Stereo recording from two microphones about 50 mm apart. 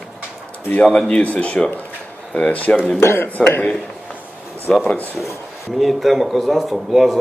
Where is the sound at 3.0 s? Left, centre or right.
Left.